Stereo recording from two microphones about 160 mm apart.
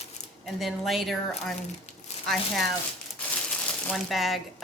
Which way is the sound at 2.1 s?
45° left (ahead or behind).